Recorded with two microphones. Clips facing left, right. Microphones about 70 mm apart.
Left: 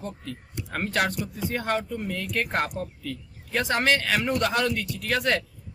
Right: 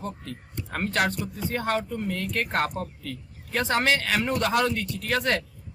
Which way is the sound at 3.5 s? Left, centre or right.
Centre.